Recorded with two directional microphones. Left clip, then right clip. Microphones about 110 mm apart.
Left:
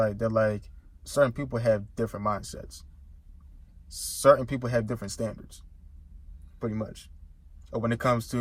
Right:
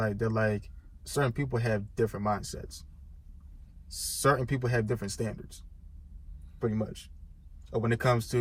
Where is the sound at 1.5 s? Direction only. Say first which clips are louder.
Left 6 dB; 25° left (ahead or behind).